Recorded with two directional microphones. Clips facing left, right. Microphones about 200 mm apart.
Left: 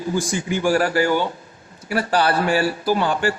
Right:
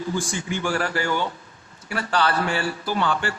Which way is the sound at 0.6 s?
40° left (ahead or behind).